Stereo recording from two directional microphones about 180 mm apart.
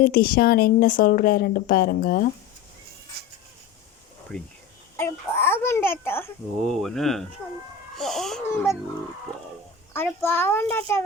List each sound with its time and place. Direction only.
0.0 s speech: 55° left (ahead or behind)
3.1 s vehicle: 60° right (ahead or behind)
4.3 s a child's voice: 5° left (ahead or behind)
6.6 s speech: centre (ahead or behind)
9.9 s a child's voice: 10° left (ahead or behind)